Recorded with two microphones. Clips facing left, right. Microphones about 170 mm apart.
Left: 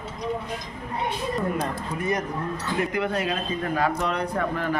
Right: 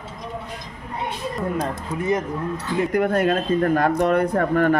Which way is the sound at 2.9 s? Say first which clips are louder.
Right 7 dB; 50° right (ahead or behind).